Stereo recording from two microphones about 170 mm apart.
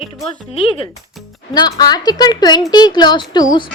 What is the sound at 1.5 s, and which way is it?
Speech, 25° left (ahead or behind).